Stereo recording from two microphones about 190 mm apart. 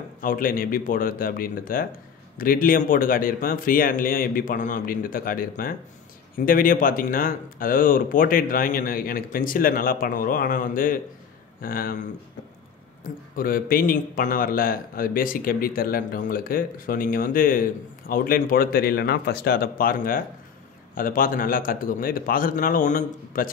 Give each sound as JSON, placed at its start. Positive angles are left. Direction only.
{"t": 0.2, "sound": "a man's voice", "side_deg": 45}
{"t": 13.4, "sound": "a man's voice", "side_deg": 50}